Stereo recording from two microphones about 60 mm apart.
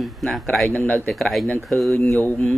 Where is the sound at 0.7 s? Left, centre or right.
Left.